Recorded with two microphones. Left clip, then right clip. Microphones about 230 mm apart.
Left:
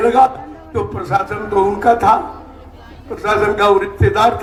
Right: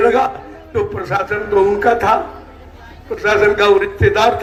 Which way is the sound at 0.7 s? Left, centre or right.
Left.